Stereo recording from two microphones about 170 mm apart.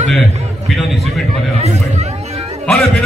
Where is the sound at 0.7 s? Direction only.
Centre (ahead or behind).